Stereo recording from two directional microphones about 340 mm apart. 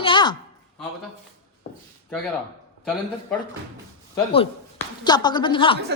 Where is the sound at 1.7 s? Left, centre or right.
Centre.